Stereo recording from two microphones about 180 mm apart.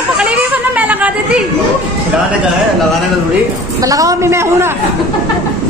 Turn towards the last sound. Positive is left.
turn(degrees=-15)  # may be behind; listen again after turning